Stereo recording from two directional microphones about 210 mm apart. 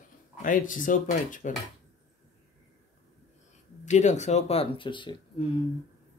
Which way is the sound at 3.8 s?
35° left (ahead or behind).